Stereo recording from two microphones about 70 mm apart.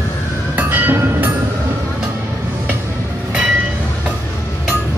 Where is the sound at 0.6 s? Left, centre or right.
Right.